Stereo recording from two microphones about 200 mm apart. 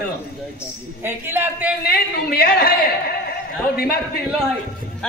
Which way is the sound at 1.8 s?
50° left (ahead or behind).